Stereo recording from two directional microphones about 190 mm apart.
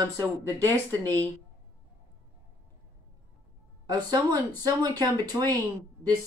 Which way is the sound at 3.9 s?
20° right (ahead or behind).